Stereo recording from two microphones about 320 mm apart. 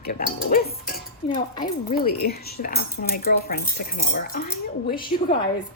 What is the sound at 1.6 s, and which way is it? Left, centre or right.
A woman's voice, left.